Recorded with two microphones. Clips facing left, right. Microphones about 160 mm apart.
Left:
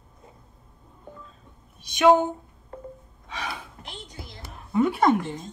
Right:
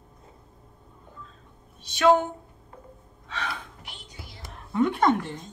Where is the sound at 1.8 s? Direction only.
15° left (ahead or behind).